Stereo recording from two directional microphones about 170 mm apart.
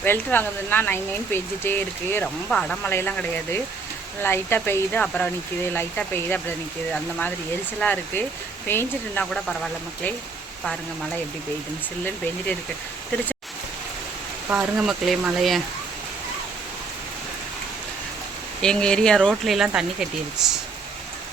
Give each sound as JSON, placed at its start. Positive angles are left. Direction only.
{"t": 0.0, "sound": "speech", "side_deg": 10}
{"t": 14.5, "sound": "speech", "side_deg": -5}
{"t": 18.6, "sound": "speech", "side_deg": 5}